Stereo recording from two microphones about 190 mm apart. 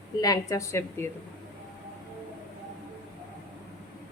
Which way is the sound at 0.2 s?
15° left (ahead or behind).